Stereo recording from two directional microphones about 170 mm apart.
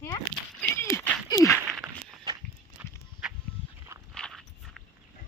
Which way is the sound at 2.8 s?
10° right (ahead or behind).